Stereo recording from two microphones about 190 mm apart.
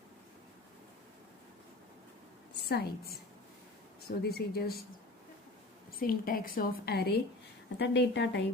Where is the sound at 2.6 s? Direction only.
55° left (ahead or behind).